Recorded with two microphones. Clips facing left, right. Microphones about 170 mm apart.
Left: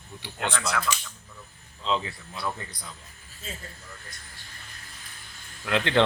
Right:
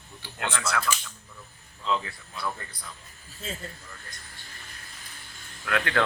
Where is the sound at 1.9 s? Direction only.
20° left (ahead or behind).